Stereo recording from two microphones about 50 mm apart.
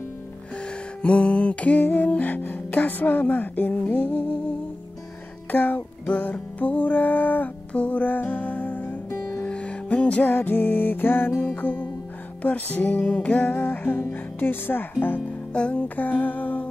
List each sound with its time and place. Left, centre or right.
1.0 s music: left
5.5 s music: left
7.7 s music: left
9.4 s music: left
10.3 s speech: left
11.4 s music: left
13.0 s music: left
13.6 s speech: left
15.5 s music: left
16.0 s music: left